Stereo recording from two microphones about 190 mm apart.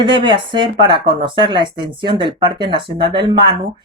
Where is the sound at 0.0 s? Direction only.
25° right (ahead or behind).